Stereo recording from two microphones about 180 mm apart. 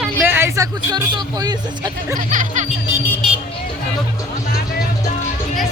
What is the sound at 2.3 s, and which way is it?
Music, 45° right (ahead or behind).